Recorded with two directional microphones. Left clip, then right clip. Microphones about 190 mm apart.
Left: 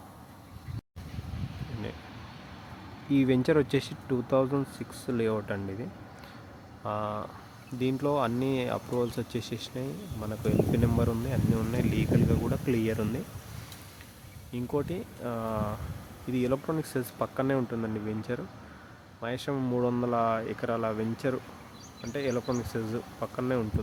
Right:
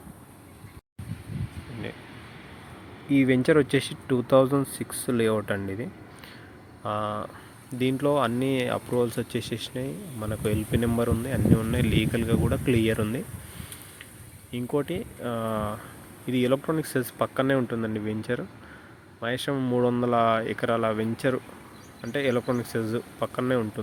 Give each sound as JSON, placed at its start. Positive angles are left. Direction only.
{"t": 3.1, "sound": "speech", "side_deg": -5}
{"t": 6.8, "sound": "speech", "side_deg": -10}
{"t": 14.5, "sound": "speech", "side_deg": -10}